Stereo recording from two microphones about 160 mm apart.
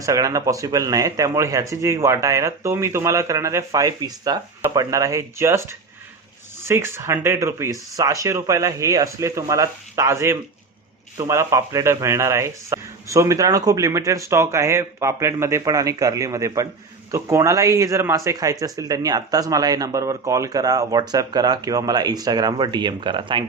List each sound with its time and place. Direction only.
0.0 s speech: 20° right (ahead or behind)